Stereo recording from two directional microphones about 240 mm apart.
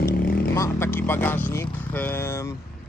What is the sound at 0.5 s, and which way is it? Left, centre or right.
Speech, centre.